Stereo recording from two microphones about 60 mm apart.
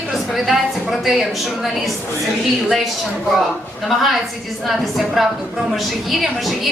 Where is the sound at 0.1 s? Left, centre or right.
Centre.